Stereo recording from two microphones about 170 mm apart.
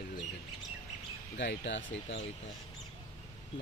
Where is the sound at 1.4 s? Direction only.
90° left.